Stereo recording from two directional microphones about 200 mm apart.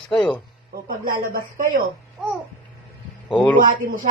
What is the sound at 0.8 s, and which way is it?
Speech, 45° right (ahead or behind).